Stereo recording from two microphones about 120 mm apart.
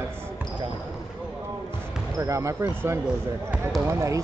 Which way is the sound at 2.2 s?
25° right (ahead or behind).